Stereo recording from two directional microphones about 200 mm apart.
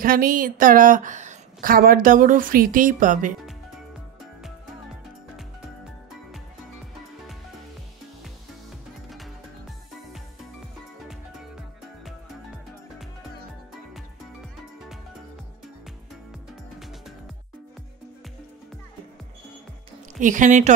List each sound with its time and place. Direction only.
0.0 s a woman's voice: 45° right (ahead or behind)
20.2 s speech: 40° right (ahead or behind)